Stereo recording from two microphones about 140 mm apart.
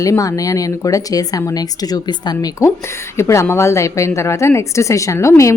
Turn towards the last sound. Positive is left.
turn(degrees=20)  # may be behind; listen again after turning